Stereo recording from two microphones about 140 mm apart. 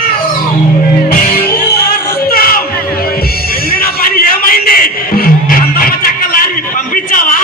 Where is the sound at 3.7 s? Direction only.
90° left.